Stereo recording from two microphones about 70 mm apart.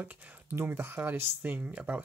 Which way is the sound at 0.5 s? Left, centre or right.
Right.